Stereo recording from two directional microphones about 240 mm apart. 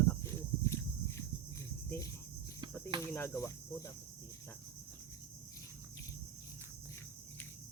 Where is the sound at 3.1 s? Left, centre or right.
Centre.